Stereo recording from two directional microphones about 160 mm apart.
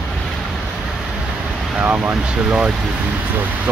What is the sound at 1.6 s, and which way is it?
Speech, 5° right (ahead or behind).